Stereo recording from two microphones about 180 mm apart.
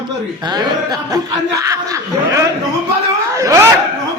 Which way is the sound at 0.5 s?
20° right (ahead or behind).